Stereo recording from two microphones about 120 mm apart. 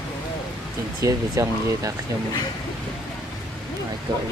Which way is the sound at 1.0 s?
25° right (ahead or behind).